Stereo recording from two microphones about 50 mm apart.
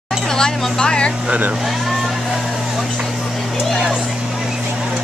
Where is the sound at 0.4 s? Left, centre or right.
Centre.